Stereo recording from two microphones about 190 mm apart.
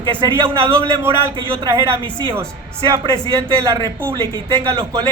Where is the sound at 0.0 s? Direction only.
25° right (ahead or behind).